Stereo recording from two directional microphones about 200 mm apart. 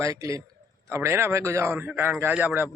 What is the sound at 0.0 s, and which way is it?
A man's voice, 15° right (ahead or behind).